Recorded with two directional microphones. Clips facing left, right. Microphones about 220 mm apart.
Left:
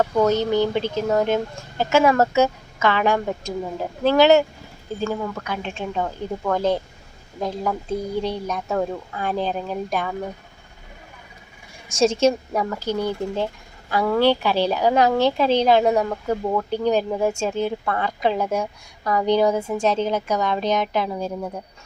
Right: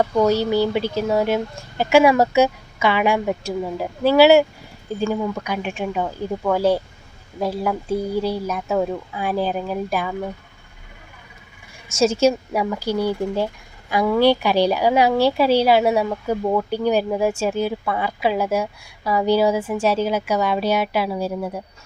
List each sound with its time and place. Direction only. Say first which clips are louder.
0.0 s a woman's voice: right 1 dB; 10° right (ahead or behind)
11.9 s a woman's voice: even; 30° left (ahead or behind)
12.2 s a woman's voice: right 1 dB; 10° right (ahead or behind)